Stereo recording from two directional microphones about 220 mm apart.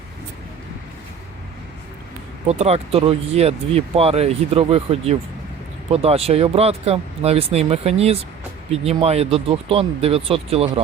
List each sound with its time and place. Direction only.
2.5 s speech: 30° right (ahead or behind)